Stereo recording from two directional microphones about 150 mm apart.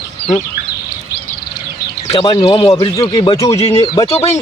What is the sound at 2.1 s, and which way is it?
Speech, 40° left (ahead or behind).